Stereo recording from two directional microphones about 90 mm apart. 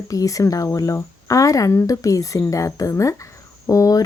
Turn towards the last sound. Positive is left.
turn(degrees=40)  # may be behind; listen again after turning